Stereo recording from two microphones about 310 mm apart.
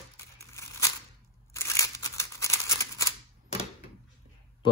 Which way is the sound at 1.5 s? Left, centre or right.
Centre.